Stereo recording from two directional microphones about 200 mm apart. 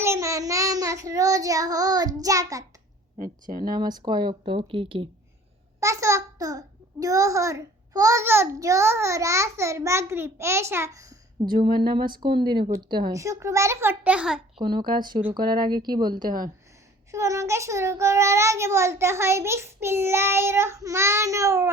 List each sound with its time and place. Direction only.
0.0 s child singing: 15° right (ahead or behind)
3.2 s speech: 45° right (ahead or behind)
3.7 s a woman's voice: 20° right (ahead or behind)
5.8 s a child's voice: 15° right (ahead or behind)
14.6 s a woman's voice: 20° right (ahead or behind)